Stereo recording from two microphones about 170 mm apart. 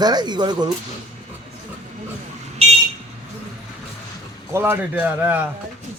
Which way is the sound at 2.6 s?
35° right (ahead or behind).